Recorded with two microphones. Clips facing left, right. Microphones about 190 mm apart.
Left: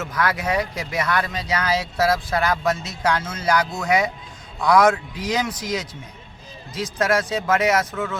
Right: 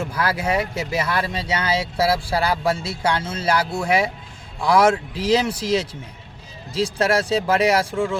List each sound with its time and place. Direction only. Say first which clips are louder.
0.1 s speech: left 2 dB; 30° right (ahead or behind)
3.6 s speech: right 2 dB; 10° right (ahead or behind)
3.8 s speech: even; 30° right (ahead or behind)